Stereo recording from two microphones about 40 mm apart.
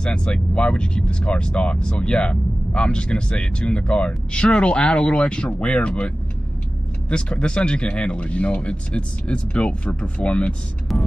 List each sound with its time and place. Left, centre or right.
0.0 s speech: left
10.9 s music: centre